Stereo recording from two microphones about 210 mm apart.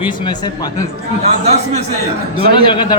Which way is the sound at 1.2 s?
30° right (ahead or behind).